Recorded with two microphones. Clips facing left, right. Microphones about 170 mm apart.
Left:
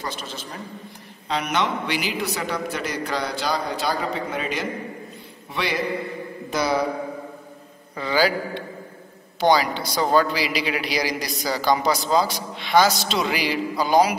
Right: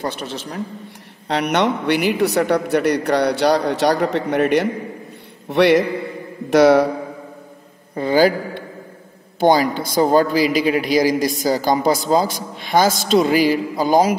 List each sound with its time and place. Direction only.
0.1 s a man's voice: 65° right (ahead or behind)
8.0 s a man's voice: 50° right (ahead or behind)